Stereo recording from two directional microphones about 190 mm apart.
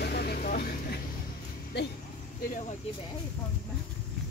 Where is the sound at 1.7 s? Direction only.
60° left (ahead or behind).